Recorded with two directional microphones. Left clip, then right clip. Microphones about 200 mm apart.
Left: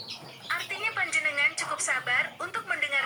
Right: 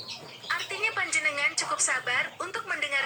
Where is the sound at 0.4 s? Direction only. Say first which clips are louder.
Right 1 dB; 15° right (ahead or behind).